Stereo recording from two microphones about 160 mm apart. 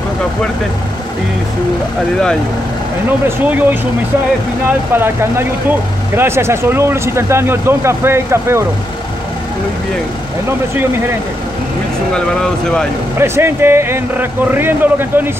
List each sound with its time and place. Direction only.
3.3 s speech: 10° right (ahead or behind)
4.6 s speech: 15° right (ahead or behind)
13.2 s speech: 15° right (ahead or behind)